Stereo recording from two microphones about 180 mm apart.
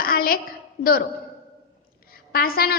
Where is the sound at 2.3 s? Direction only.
55° left (ahead or behind).